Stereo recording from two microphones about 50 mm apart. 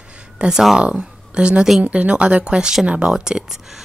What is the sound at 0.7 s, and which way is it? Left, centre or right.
Speech, centre.